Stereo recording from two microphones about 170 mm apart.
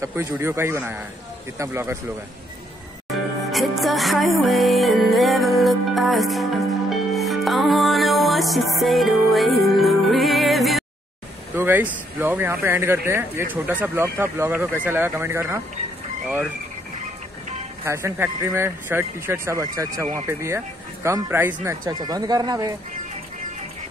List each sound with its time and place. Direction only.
0.0 s speech: 15° right (ahead or behind)
3.5 s music: centre (ahead or behind)
11.5 s speech: 10° right (ahead or behind)
17.8 s speech: 15° right (ahead or behind)
21.8 s speech: 25° right (ahead or behind)